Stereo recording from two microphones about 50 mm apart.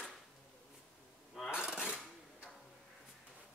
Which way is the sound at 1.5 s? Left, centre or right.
Centre.